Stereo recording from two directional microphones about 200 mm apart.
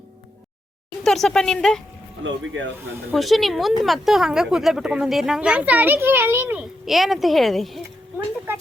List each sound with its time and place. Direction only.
1.0 s speech: centre (ahead or behind)
2.2 s speech: 70° right (ahead or behind)
3.1 s speech: centre (ahead or behind)